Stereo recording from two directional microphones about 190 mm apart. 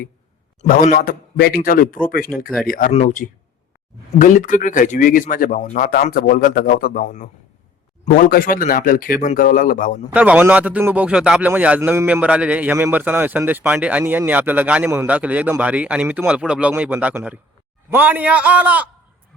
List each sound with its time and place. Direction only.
0.6 s speech: 45° left (ahead or behind)
10.1 s a man's voice: 10° right (ahead or behind)